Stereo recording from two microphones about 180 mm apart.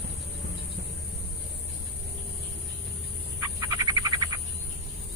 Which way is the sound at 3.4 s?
20° right (ahead or behind).